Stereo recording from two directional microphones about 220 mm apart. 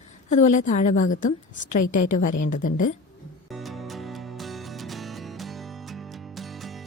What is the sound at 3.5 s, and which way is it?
Music, centre (ahead or behind).